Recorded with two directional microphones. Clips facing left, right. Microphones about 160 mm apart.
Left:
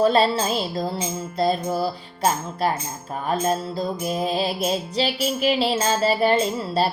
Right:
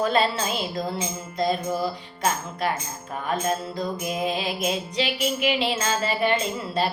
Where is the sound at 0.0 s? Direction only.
35° left (ahead or behind).